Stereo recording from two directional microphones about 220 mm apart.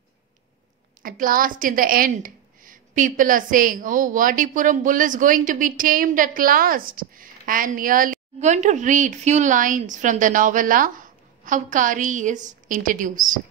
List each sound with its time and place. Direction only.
1.0 s a woman's voice: 40° right (ahead or behind)